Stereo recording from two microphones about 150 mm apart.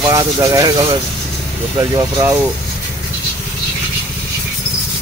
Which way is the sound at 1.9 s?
20° right (ahead or behind).